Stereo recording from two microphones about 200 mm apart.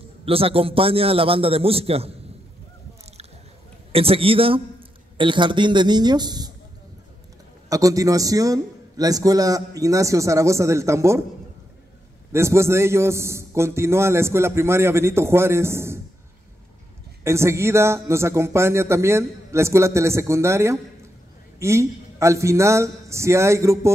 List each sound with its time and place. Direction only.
0.2 s a man's voice: 30° right (ahead or behind)
3.9 s a man's voice: 30° right (ahead or behind)
7.7 s a man's voice: 15° right (ahead or behind)
12.3 s a man's voice: 15° right (ahead or behind)
17.2 s a man's voice: 15° right (ahead or behind)